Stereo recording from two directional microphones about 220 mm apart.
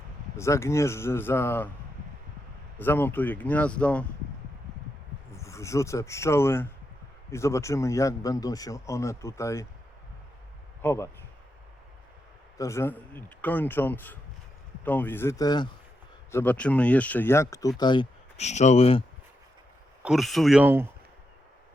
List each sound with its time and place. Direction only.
0.3 s a man's voice: 15° left (ahead or behind)
2.7 s a man's voice: 10° left (ahead or behind)
5.3 s a man's voice: 15° left (ahead or behind)
10.8 s a man's voice: 10° left (ahead or behind)
12.5 s a man's voice: 15° left (ahead or behind)
16.3 s a man's voice: 5° left (ahead or behind); by 19.0 s 25° left (ahead or behind)
20.0 s speech: centre (ahead or behind)